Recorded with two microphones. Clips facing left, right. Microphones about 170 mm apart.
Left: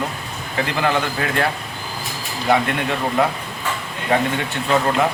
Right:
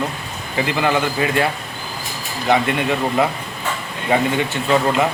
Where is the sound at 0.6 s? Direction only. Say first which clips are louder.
Right 2 dB; centre (ahead or behind).